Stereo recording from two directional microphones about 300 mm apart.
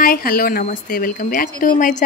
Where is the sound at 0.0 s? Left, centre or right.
Left.